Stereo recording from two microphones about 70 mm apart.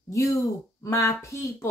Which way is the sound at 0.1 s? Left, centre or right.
Left.